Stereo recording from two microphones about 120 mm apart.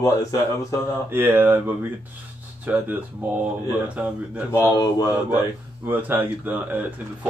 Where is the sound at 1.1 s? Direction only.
15° right (ahead or behind).